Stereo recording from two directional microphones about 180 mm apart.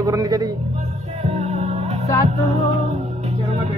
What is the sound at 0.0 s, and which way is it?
Speech, 20° right (ahead or behind).